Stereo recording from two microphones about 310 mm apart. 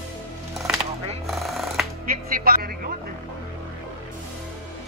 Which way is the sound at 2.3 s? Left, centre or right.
Right.